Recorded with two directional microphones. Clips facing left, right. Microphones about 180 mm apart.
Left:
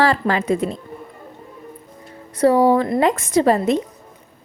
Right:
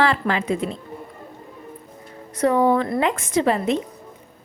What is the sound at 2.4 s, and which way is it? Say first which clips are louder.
A woman's voice: left 4 dB; 35° left (ahead or behind).